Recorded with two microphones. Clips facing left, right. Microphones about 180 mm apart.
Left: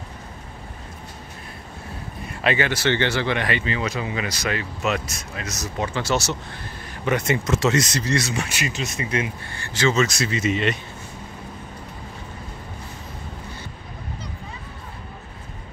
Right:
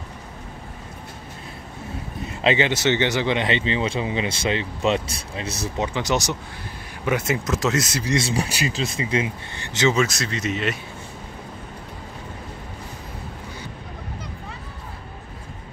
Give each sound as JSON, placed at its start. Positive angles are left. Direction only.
{"t": 2.2, "sound": "speech", "side_deg": -20}
{"t": 5.8, "sound": "speech", "side_deg": -15}
{"t": 7.1, "sound": "speech", "side_deg": -5}
{"t": 8.1, "sound": "speech", "side_deg": -30}
{"t": 10.0, "sound": "speech", "side_deg": 0}